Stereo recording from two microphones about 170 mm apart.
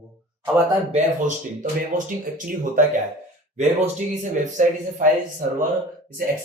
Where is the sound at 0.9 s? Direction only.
50° right (ahead or behind).